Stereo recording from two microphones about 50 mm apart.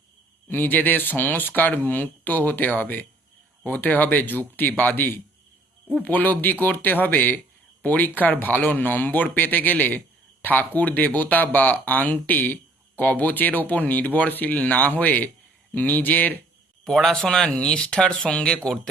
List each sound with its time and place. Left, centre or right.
0.4 s speech: left
16.8 s speech: centre